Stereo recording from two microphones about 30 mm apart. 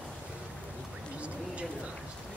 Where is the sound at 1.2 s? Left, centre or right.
Right.